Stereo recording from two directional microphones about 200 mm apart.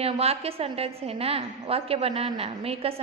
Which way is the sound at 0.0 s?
30° right (ahead or behind).